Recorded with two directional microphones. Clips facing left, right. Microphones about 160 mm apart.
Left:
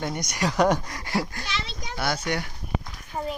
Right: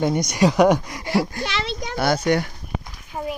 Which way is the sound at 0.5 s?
15° right (ahead or behind).